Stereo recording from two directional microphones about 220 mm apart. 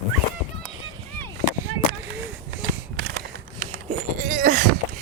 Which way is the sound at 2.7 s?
45° right (ahead or behind).